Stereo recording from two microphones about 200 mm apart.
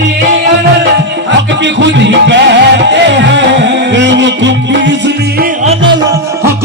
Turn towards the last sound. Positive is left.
turn(degrees=-60)  # may be behind; listen again after turning